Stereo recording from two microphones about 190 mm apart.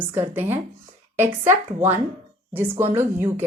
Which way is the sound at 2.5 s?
15° right (ahead or behind).